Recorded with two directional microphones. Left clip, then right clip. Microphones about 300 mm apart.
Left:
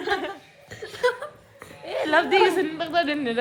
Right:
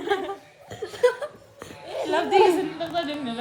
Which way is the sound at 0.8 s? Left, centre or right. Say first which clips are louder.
Right 2 dB; right.